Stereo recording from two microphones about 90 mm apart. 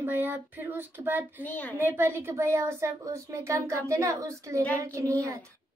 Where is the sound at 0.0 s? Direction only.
20° right (ahead or behind).